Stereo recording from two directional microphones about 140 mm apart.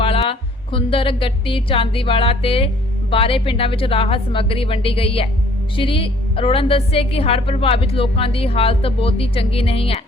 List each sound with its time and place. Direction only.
0.0 s a woman's voice: 40° left (ahead or behind)